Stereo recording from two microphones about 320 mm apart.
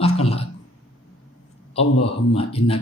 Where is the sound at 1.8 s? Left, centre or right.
Centre.